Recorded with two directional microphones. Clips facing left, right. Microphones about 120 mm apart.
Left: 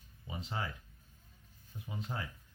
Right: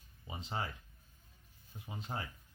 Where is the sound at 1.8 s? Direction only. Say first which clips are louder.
Left 1 dB; 25° right (ahead or behind).